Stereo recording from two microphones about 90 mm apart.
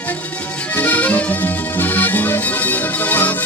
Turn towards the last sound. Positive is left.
turn(degrees=20)  # may be behind; listen again after turning